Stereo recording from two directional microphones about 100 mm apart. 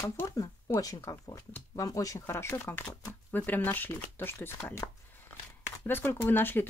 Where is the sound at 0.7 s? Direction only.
35° left (ahead or behind).